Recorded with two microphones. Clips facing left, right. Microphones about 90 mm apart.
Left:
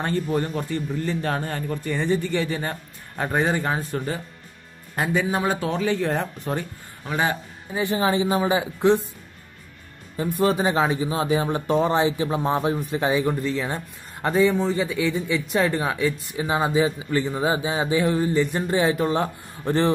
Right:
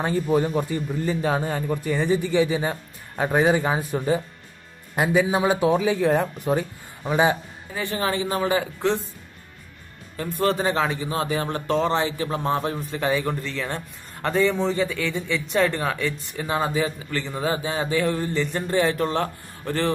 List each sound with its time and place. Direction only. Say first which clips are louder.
0.0 s a man's voice: right 3 dB; 5° right (ahead or behind)
7.7 s speech: left 4 dB; 20° left (ahead or behind)
10.1 s speech: left 2 dB; 15° left (ahead or behind)
16.4 s speech: left 3 dB; 15° left (ahead or behind)